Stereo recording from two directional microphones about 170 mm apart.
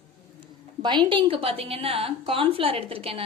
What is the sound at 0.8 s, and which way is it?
A woman's voice, 25° right (ahead or behind).